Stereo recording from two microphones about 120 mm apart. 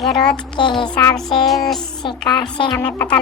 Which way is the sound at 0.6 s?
40° left (ahead or behind).